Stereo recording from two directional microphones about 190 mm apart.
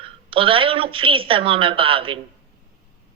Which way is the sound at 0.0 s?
30° right (ahead or behind).